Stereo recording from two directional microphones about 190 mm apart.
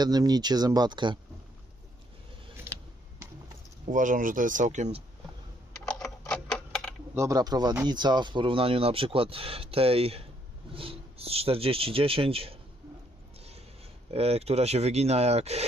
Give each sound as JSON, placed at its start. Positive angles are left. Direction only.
{"t": 0.0, "sound": "speech", "side_deg": -20}
{"t": 3.9, "sound": "speech", "side_deg": -45}
{"t": 5.8, "sound": "typing", "side_deg": 5}
{"t": 7.2, "sound": "speech", "side_deg": -20}
{"t": 14.1, "sound": "speech", "side_deg": -30}